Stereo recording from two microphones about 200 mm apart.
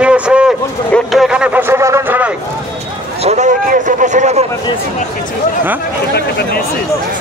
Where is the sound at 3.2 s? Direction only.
35° right (ahead or behind).